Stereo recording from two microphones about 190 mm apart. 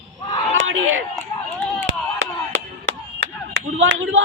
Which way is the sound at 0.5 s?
90° right.